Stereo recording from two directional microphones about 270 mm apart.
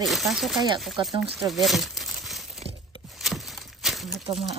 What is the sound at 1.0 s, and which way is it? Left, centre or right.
Speech, centre.